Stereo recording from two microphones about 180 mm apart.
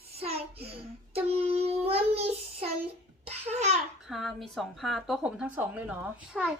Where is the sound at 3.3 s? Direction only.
40° right (ahead or behind).